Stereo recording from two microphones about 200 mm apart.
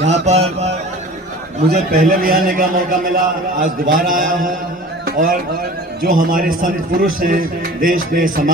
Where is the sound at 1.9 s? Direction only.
45° right (ahead or behind).